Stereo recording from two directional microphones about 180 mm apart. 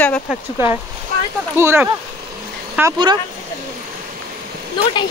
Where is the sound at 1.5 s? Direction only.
15° right (ahead or behind).